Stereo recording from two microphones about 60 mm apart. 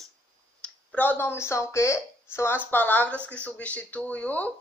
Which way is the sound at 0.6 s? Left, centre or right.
Centre.